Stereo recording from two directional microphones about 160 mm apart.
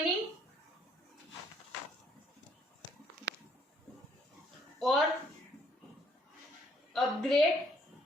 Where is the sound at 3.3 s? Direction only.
90° right.